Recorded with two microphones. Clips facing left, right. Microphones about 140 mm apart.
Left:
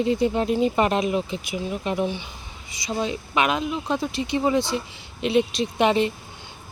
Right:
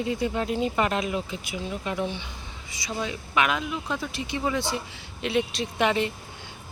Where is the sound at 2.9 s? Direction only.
25° left (ahead or behind).